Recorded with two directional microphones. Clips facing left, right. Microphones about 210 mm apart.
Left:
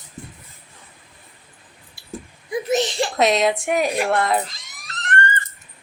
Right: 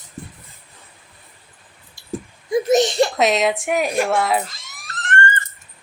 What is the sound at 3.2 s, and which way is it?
Speech, centre (ahead or behind).